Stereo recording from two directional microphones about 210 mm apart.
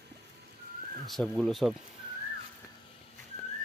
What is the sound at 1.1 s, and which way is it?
Speech, centre (ahead or behind).